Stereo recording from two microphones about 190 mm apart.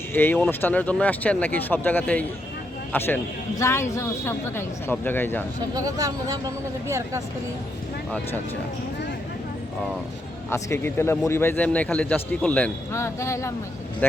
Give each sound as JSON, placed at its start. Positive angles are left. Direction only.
{"t": 0.1, "sound": "a man's voice", "side_deg": 10}
{"t": 5.7, "sound": "speech", "side_deg": -20}
{"t": 10.5, "sound": "a man's voice", "side_deg": 15}